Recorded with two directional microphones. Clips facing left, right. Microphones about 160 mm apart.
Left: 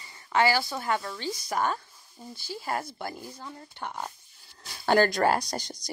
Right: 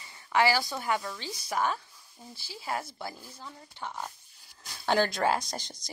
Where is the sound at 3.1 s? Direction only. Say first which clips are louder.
Left 4 dB; 55° left (ahead or behind).